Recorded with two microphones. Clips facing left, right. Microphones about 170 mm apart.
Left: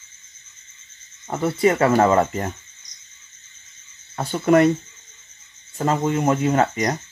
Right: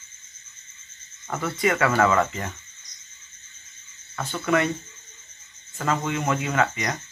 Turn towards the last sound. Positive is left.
turn(degrees=40)  # may be behind; listen again after turning